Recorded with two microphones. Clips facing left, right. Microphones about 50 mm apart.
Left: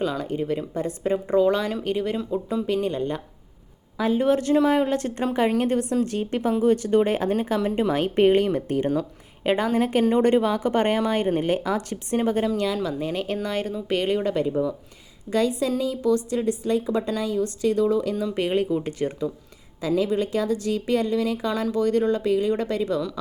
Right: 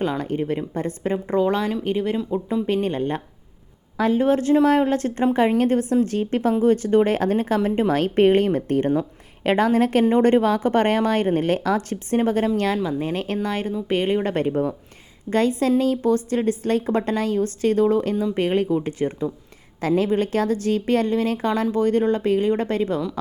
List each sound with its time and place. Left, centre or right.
0.0 s speech: right
1.4 s speech: right
1.7 s speech: centre
2.6 s speech: right
7.6 s speech: right
7.9 s speech: right
9.4 s a woman's voice: right
10.0 s a woman's voice: right
13.0 s speech: right
14.3 s a woman's voice: right
20.0 s speech: right